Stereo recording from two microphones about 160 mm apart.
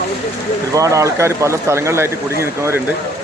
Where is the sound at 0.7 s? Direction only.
20° right (ahead or behind).